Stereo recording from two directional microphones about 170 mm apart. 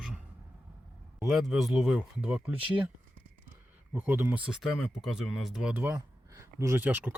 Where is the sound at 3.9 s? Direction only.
10° right (ahead or behind).